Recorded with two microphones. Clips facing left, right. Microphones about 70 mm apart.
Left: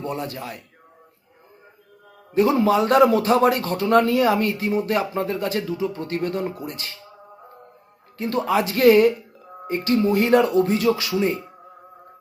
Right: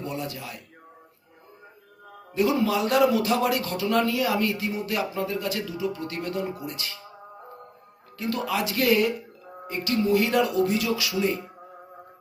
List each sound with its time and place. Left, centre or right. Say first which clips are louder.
0.0 s a man's voice: left 4 dB; left
2.3 s a man's voice: left 5 dB; left
8.2 s a man's voice: left 6 dB; left